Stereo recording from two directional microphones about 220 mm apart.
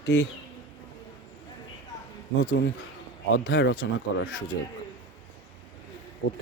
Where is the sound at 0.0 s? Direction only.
55° left (ahead or behind).